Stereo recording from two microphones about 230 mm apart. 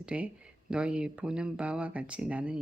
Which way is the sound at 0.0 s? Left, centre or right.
Centre.